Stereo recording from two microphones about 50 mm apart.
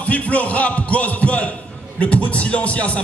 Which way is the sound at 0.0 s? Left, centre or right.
Left.